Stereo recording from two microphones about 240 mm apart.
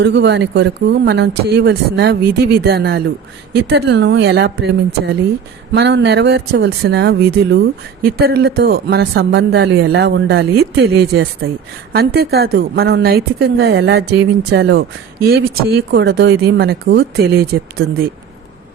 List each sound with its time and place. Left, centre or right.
0.0 s a woman's voice: right